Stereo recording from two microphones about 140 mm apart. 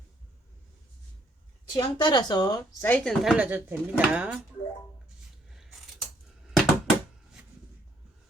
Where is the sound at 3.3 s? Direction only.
10° right (ahead or behind).